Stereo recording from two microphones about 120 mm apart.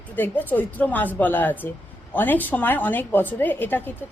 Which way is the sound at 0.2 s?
15° left (ahead or behind).